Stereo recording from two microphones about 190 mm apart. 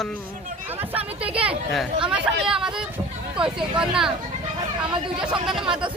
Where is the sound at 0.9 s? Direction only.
30° right (ahead or behind).